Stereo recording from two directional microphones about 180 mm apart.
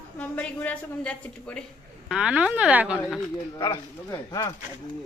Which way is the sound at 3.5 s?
25° left (ahead or behind).